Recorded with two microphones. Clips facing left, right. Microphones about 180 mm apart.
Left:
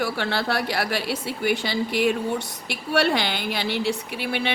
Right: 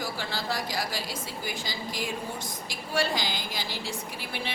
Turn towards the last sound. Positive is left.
turn(degrees=70)  # may be behind; listen again after turning